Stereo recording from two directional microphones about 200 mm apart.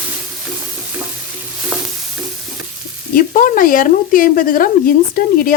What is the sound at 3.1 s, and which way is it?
Speech, 45° left (ahead or behind).